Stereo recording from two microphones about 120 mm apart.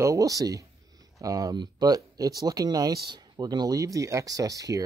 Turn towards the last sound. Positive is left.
turn(degrees=-30)  # may be behind; listen again after turning